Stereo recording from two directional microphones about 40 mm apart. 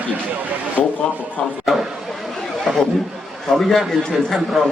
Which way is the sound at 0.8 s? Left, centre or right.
Left.